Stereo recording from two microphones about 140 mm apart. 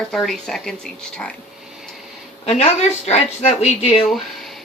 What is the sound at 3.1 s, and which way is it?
Speech, 50° left (ahead or behind).